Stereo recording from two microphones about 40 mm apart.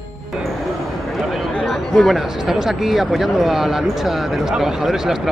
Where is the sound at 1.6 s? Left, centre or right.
Centre.